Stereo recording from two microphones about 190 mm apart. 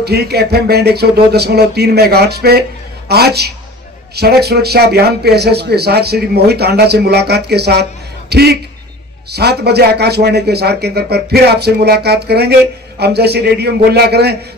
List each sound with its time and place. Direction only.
0.0 s a man's voice: 60° right (ahead or behind)